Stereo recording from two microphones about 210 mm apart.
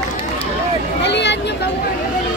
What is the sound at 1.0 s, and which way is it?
Vehicle, 55° left (ahead or behind).